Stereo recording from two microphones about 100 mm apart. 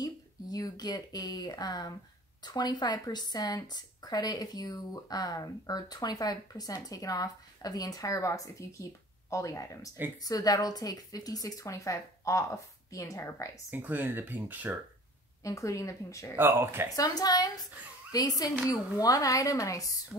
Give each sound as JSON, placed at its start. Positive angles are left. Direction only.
{"t": 0.0, "sound": "speech", "side_deg": 40}
{"t": 13.7, "sound": "speech", "side_deg": -20}
{"t": 15.4, "sound": "speech", "side_deg": 30}
{"t": 16.3, "sound": "speech", "side_deg": -25}
{"t": 16.9, "sound": "speech", "side_deg": 40}